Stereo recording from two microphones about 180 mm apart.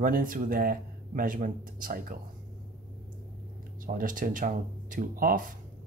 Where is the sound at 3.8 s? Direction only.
50° right (ahead or behind).